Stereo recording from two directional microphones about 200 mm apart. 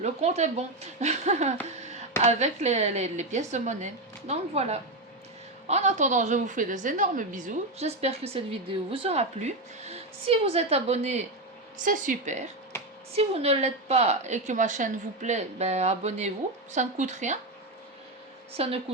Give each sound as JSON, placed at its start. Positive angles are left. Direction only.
{"t": 0.0, "sound": "a woman's voice", "side_deg": -35}
{"t": 18.5, "sound": "a woman's voice", "side_deg": -30}